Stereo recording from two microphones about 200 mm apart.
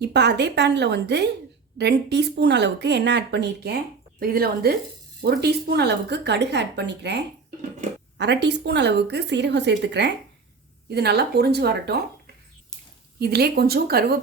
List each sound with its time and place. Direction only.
0.0 s speech: 55° right (ahead or behind)
13.1 s speech: 55° right (ahead or behind)